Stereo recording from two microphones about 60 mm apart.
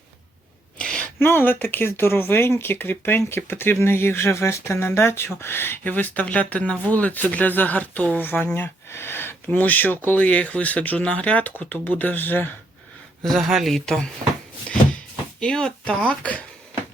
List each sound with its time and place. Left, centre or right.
0.8 s a sound: centre
1.2 s speech: left
8.5 s speech: left
9.6 s speech: left
13.2 s speech: centre
15.4 s speech: centre